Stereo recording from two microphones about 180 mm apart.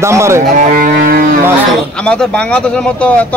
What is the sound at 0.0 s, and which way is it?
Speech, 15° right (ahead or behind).